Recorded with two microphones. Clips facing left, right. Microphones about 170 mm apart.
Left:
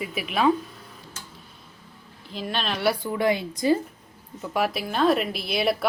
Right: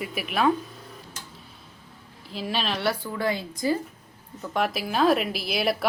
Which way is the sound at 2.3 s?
5° right (ahead or behind).